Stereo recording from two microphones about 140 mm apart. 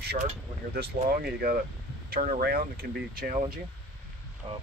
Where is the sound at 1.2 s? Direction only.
90° right.